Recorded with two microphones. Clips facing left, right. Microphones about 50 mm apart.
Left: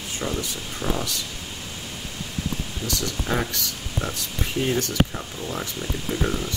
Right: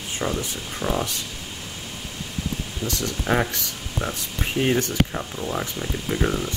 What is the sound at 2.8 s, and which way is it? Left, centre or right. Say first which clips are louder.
Speech: right 3 dB; right.